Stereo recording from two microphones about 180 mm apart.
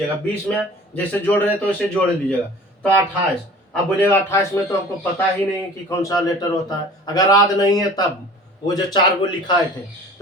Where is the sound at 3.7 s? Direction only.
10° left (ahead or behind).